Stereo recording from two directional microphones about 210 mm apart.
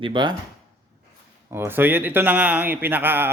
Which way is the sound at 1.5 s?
10° right (ahead or behind).